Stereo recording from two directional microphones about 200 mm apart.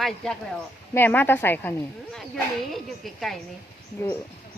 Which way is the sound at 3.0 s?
Centre (ahead or behind).